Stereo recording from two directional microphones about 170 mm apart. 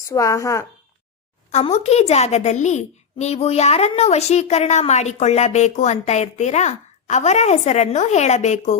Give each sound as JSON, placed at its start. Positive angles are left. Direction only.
{"t": 0.1, "sound": "a woman's voice", "side_deg": 20}
{"t": 1.5, "sound": "a child's voice", "side_deg": 40}